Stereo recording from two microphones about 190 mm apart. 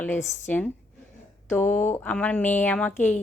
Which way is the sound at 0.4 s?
10° left (ahead or behind).